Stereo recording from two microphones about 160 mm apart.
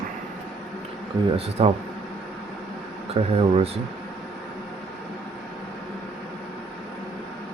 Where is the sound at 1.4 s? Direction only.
35° right (ahead or behind).